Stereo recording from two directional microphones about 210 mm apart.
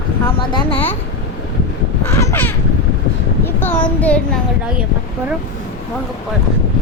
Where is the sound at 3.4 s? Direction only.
10° left (ahead or behind).